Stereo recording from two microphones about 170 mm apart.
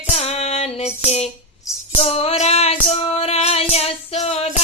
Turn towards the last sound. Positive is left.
turn(degrees=35)  # may be behind; listen again after turning